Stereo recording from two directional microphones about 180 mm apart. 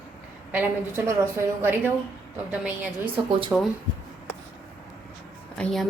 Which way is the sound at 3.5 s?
10° right (ahead or behind).